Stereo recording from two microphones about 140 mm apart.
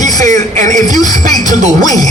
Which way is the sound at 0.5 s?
65° right (ahead or behind).